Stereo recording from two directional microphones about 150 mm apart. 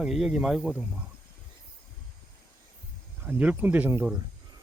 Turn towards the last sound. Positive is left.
turn(degrees=-20)  # may be behind; listen again after turning